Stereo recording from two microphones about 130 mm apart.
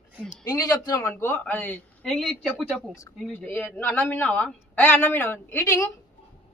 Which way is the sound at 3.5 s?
15° left (ahead or behind).